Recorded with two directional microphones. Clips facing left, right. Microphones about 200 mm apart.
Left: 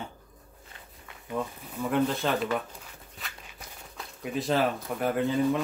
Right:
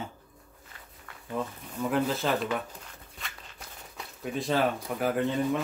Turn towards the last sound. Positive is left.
turn(degrees=0)  # may be behind; listen again after turning